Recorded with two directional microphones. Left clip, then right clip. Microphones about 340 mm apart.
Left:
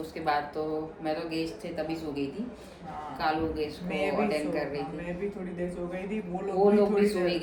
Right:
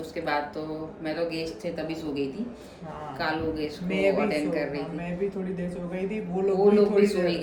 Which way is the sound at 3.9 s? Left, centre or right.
Centre.